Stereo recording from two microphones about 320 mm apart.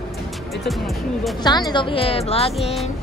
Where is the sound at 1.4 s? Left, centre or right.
Centre.